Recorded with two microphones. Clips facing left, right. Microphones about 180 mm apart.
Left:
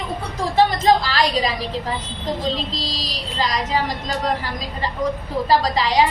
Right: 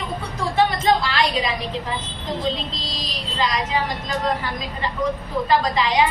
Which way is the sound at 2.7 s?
35° left (ahead or behind).